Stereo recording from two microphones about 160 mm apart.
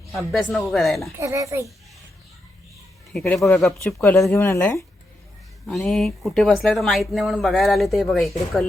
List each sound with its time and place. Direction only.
0.1 s speech: centre (ahead or behind)
1.2 s a child's voice: 20° right (ahead or behind)
3.1 s speech: 5° left (ahead or behind)
3.9 s speech: 15° left (ahead or behind)
5.6 s speech: centre (ahead or behind)